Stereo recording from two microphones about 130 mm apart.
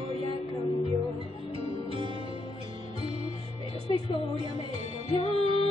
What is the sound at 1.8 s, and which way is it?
Music, 40° right (ahead or behind).